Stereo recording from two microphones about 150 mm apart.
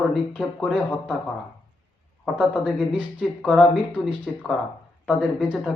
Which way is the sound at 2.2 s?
Centre (ahead or behind).